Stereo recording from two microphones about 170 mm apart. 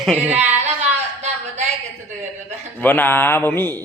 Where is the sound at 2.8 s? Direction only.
10° left (ahead or behind).